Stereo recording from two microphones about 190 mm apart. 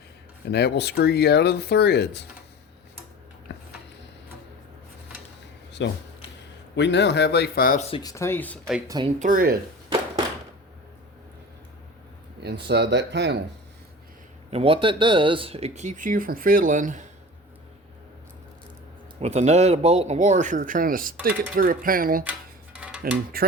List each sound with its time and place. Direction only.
0.5 s speech: 60° left (ahead or behind)
3.5 s a sound: 60° left (ahead or behind)
5.8 s speech: 70° left (ahead or behind); by 7.9 s 45° left (ahead or behind)
7.9 s speech: 25° left (ahead or behind)
8.1 s speech: 15° left (ahead or behind)
9.1 s speech: 45° right (ahead or behind)
12.6 s speech: 60° right (ahead or behind)
14.5 s speech: 30° right (ahead or behind)
19.2 s speech: 35° right (ahead or behind)
22.2 s dishes: 10° right (ahead or behind)
23.3 s speech: 50° right (ahead or behind)